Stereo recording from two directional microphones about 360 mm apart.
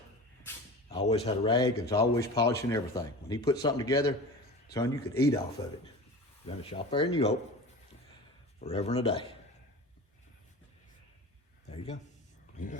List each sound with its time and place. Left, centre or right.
0.4 s speech: centre
6.4 s speech: centre
8.6 s speech: centre
11.7 s a sound: centre